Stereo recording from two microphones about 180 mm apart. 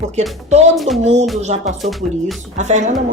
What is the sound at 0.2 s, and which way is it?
Speech, 40° right (ahead or behind).